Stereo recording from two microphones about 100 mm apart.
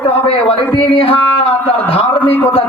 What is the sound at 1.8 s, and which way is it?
Speech, 65° left (ahead or behind).